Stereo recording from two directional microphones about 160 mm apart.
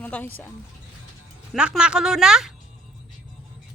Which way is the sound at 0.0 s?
10° left (ahead or behind).